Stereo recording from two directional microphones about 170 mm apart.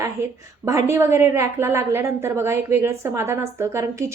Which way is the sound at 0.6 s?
15° right (ahead or behind).